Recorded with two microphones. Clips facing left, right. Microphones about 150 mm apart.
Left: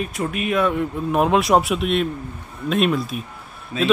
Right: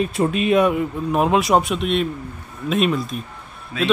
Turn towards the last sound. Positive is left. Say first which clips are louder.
# left 1 dB
turn(degrees=30)  # may be behind; listen again after turning